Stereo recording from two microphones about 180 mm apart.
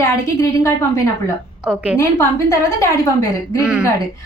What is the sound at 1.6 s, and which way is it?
Speech, 5° right (ahead or behind).